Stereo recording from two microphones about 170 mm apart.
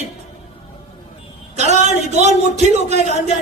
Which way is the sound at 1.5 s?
40° right (ahead or behind).